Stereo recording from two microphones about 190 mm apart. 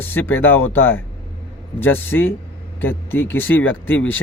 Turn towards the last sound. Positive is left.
turn(degrees=10)  # may be behind; listen again after turning